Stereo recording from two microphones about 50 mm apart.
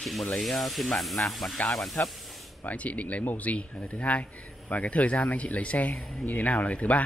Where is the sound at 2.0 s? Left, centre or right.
Left.